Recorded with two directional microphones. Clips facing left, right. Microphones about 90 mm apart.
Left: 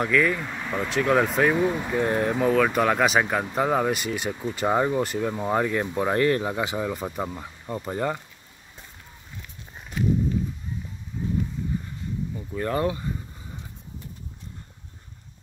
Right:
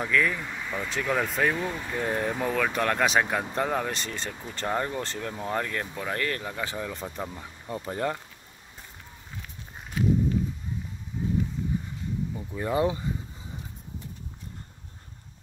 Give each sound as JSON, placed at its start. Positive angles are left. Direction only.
{"t": 0.0, "sound": "speech", "side_deg": 0}
{"t": 1.5, "sound": "speech", "side_deg": 20}
{"t": 1.9, "sound": "speech", "side_deg": 0}
{"t": 5.9, "sound": "speech", "side_deg": 25}
{"t": 12.4, "sound": "speech", "side_deg": -15}